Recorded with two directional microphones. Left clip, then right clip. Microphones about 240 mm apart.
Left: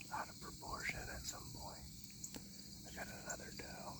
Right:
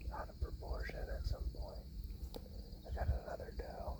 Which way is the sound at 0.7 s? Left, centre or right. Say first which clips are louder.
Left 4 dB; centre.